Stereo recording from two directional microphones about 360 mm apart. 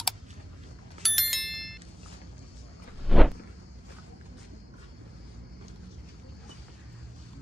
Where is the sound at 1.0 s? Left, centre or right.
Centre.